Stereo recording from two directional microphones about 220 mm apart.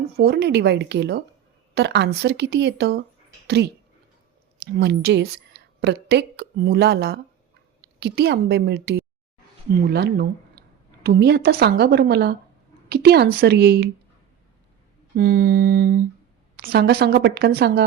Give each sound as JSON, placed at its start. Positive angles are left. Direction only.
{"t": 0.2, "sound": "a woman's voice", "side_deg": -45}
{"t": 15.1, "sound": "a sound", "side_deg": -40}
{"t": 16.6, "sound": "a woman's voice", "side_deg": -45}